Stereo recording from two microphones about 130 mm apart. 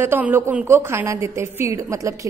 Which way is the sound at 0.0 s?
15° right (ahead or behind).